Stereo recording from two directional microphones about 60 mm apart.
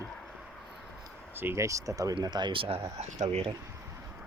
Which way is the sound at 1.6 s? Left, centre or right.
Right.